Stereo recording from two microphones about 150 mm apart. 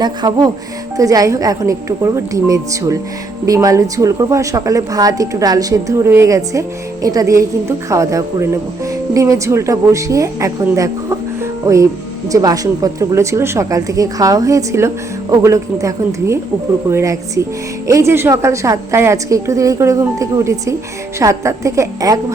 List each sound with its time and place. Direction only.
0.0 s a woman's voice: 25° right (ahead or behind)